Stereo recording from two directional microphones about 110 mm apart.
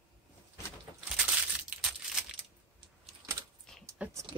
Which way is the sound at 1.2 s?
10° right (ahead or behind).